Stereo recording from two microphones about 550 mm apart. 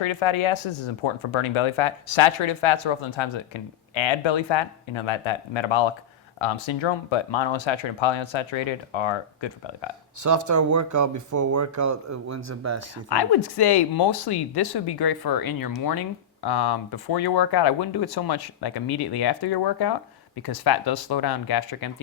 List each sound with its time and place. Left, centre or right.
0.0 s speech: left
10.2 s speech: right
13.1 s speech: left